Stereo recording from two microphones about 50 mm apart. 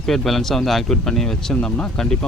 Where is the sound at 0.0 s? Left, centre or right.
Centre.